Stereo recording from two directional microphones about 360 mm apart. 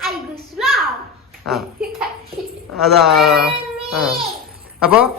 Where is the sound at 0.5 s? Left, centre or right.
Centre.